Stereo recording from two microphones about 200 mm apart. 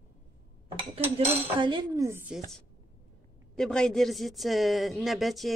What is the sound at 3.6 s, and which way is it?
Speech, 5° left (ahead or behind).